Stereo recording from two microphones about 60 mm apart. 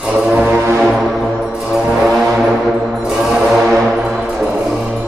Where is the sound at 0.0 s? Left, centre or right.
Centre.